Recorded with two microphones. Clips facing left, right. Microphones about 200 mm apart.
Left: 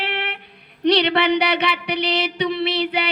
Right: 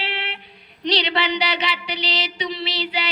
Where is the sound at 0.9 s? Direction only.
55° left (ahead or behind).